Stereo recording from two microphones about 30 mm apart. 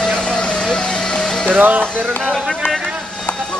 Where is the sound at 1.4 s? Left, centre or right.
Right.